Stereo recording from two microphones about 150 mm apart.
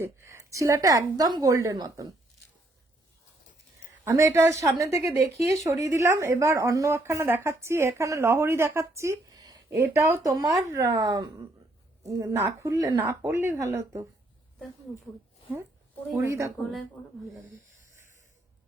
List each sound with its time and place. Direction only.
0.0 s a woman's voice: 20° right (ahead or behind)
4.0 s a woman's voice: 20° right (ahead or behind)
16.1 s a woman's voice: 20° right (ahead or behind)